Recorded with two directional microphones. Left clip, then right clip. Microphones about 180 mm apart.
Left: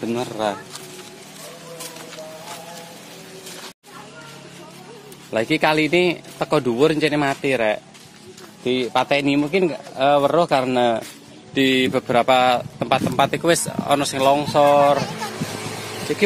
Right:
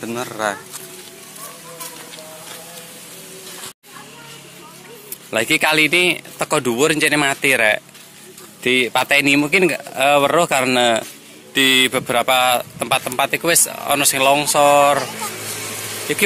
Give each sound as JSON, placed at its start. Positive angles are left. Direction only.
{"t": 0.1, "sound": "speech", "side_deg": 25}
{"t": 5.3, "sound": "speech", "side_deg": 0}
{"t": 16.1, "sound": "speech", "side_deg": 0}